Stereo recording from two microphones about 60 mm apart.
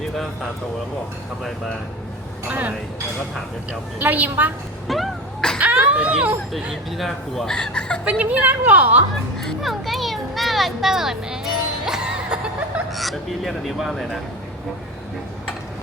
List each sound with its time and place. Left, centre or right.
2.5 s a woman's voice: right
4.0 s a woman's voice: right
4.9 s a sound: centre
5.5 s a sound: right
6.9 s speech: centre
7.5 s speech: centre
8.2 s a woman's voice: right
9.4 s speech: centre